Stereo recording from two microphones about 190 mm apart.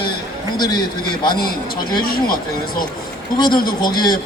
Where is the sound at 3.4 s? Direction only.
25° left (ahead or behind).